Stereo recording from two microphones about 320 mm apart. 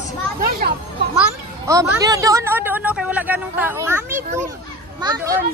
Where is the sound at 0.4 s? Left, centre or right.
Right.